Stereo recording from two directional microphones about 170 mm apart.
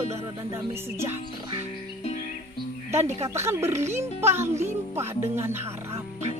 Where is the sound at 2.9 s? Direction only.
40° right (ahead or behind).